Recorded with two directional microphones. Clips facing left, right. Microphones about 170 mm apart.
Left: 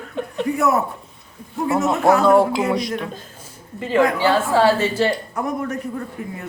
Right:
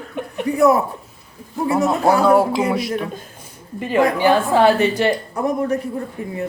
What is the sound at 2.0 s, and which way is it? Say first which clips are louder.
Speech: left 1 dB; 30° right (ahead or behind).